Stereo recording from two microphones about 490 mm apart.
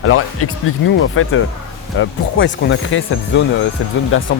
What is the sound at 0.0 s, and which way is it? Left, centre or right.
Speech, left.